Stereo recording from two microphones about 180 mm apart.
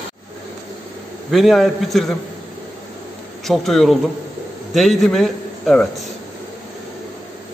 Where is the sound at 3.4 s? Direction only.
Centre (ahead or behind).